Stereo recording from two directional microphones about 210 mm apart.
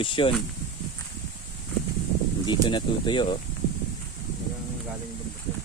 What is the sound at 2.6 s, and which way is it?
Speech, 20° left (ahead or behind).